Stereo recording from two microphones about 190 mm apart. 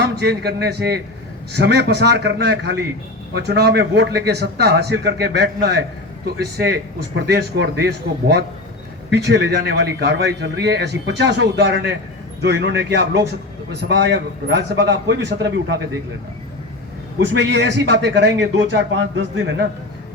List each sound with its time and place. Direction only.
0.0 s a man's voice: 60° right (ahead or behind)
17.2 s a man's voice: 65° right (ahead or behind)